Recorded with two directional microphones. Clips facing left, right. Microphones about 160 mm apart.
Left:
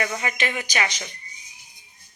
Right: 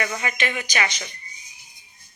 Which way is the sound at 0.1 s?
30° left (ahead or behind).